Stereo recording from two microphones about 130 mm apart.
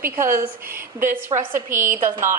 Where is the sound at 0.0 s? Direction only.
20° right (ahead or behind).